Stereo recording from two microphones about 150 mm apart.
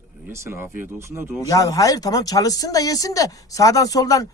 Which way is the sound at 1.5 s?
25° left (ahead or behind).